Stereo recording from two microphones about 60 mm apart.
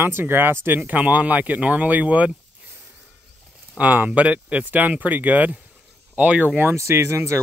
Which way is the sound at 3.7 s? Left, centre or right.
Right.